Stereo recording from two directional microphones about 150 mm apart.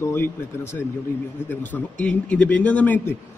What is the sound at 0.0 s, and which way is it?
A man's voice, 15° left (ahead or behind).